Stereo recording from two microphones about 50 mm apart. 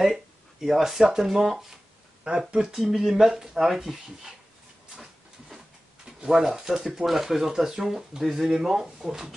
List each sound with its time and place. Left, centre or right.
0.0 s speech: centre
2.2 s speech: right
2.9 s speech: centre
6.4 s speech: centre